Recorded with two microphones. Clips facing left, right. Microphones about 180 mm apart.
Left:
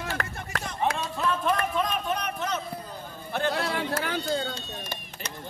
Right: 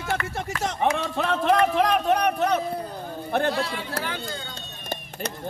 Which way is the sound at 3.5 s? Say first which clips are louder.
Even; 60° left (ahead or behind).